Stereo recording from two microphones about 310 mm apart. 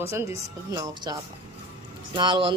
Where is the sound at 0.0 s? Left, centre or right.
Centre.